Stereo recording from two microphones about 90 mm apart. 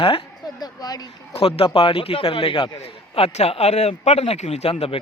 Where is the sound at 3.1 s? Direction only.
90° left.